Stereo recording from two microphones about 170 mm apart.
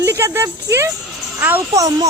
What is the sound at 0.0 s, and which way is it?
Speech, 15° right (ahead or behind).